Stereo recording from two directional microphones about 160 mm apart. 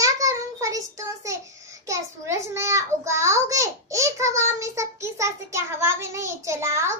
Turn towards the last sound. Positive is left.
turn(degrees=-15)  # may be behind; listen again after turning